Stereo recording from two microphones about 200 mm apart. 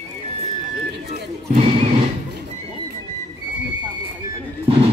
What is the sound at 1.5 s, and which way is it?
Music, 30° right (ahead or behind).